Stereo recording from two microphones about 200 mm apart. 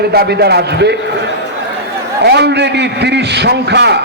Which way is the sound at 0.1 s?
50° right (ahead or behind).